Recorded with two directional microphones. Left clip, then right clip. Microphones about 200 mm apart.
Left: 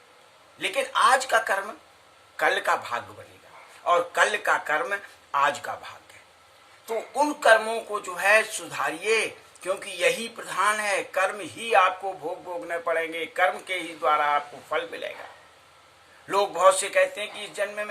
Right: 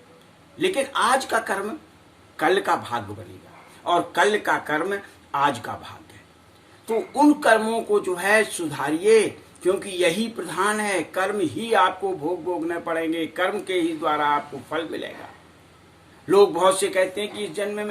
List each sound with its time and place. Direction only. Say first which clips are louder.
0.6 s a man's voice: even; 5° left (ahead or behind)
16.3 s a man's voice: right 3 dB; 5° left (ahead or behind)